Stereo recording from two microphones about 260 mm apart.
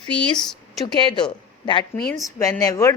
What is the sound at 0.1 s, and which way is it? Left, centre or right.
Speech, centre.